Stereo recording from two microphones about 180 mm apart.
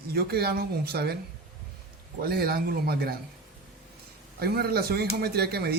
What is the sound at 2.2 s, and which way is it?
Speech, 60° right (ahead or behind).